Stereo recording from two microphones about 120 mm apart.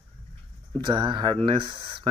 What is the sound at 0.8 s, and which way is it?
Speech, 40° right (ahead or behind).